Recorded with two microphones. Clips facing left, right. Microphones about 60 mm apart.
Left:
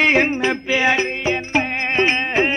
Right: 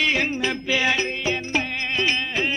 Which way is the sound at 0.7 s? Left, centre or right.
Left.